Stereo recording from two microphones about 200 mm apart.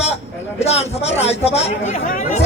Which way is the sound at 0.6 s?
30° left (ahead or behind).